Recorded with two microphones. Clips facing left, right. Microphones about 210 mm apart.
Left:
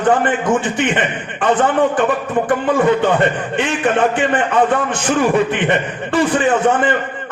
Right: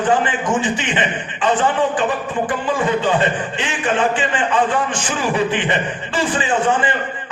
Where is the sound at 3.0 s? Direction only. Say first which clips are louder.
Left 3 dB; 60° left (ahead or behind).